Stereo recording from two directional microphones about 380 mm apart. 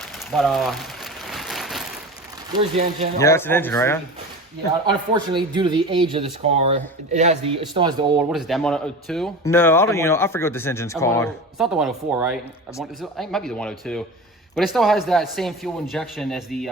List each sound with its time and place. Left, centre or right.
0.3 s speech: centre
1.3 s a sound: centre
2.5 s speech: centre
3.2 s speech: centre
4.9 s speech: centre